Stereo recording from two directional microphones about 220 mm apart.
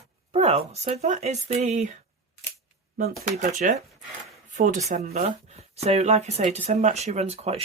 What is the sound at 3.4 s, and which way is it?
Speech, 35° right (ahead or behind).